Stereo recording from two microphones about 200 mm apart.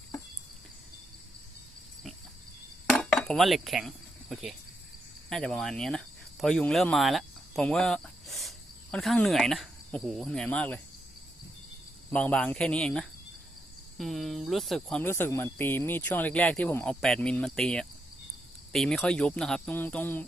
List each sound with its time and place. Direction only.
2.9 s insect: 5° left (ahead or behind)
5.3 s speech: 5° left (ahead or behind)
12.1 s speech: 5° left (ahead or behind)